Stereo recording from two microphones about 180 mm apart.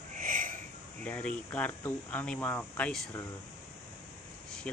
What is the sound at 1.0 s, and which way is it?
Speech, 5° left (ahead or behind).